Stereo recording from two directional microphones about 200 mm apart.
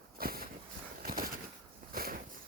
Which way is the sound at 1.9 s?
45° right (ahead or behind).